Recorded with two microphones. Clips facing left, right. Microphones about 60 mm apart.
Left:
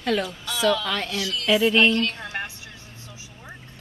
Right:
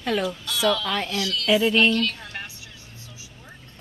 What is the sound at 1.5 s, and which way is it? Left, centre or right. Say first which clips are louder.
Speech: left 1 dB; centre.